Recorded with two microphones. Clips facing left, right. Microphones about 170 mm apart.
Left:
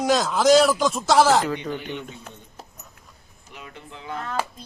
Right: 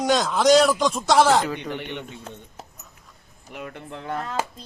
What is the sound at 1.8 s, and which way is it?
Speech, 70° right (ahead or behind).